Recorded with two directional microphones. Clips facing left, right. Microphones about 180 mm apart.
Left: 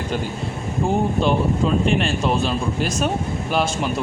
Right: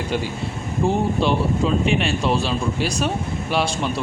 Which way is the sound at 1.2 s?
Centre (ahead or behind).